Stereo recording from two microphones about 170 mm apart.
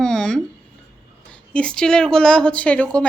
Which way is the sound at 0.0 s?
5° left (ahead or behind).